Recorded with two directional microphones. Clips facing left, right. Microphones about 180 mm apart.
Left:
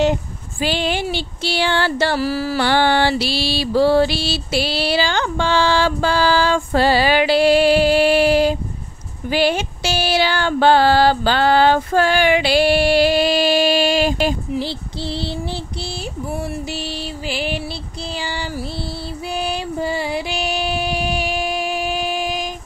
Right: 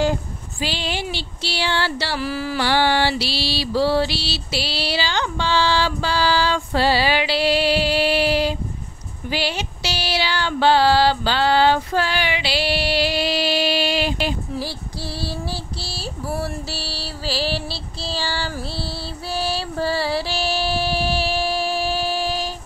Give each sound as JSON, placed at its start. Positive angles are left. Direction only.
{"t": 0.6, "sound": "mantra", "side_deg": 50}
{"t": 2.6, "sound": "mantra", "side_deg": 55}
{"t": 14.5, "sound": "child singing", "side_deg": 25}
{"t": 16.7, "sound": "music", "side_deg": 20}
{"t": 18.0, "sound": "child singing", "side_deg": 20}
{"t": 19.3, "sound": "music", "side_deg": 15}